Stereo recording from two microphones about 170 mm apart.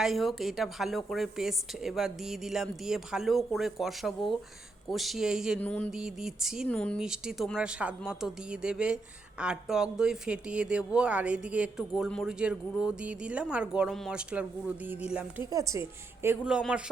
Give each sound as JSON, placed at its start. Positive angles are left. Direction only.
{"t": 0.0, "sound": "a woman's voice", "side_deg": 0}
{"t": 5.5, "sound": "a sound", "side_deg": 10}
{"t": 5.9, "sound": "a woman's voice", "side_deg": -5}
{"t": 6.7, "sound": "a sound", "side_deg": 5}
{"t": 7.0, "sound": "a woman's voice", "side_deg": -5}
{"t": 15.4, "sound": "speech", "side_deg": -20}